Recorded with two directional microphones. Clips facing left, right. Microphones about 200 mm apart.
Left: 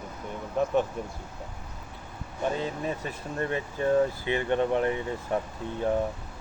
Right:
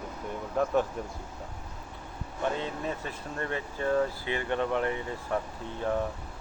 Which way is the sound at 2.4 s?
15° left (ahead or behind).